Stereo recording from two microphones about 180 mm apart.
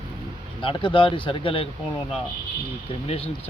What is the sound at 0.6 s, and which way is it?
Speech, 25° left (ahead or behind).